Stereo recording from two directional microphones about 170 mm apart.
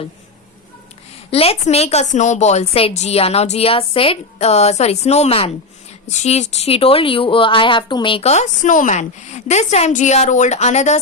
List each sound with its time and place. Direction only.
1.3 s a woman's voice: 35° left (ahead or behind)